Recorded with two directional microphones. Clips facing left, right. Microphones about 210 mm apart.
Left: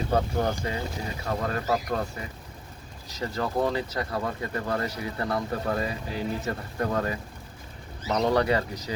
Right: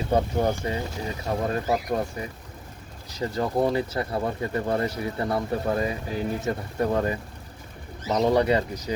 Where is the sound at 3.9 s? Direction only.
25° right (ahead or behind).